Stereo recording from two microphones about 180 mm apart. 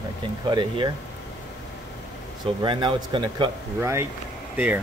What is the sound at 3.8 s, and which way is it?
Speech, 15° right (ahead or behind).